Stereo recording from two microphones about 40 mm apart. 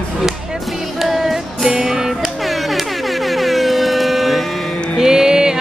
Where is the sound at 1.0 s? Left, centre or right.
Centre.